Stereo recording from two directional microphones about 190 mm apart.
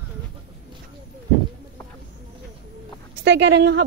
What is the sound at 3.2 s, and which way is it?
Speech, 70° right (ahead or behind).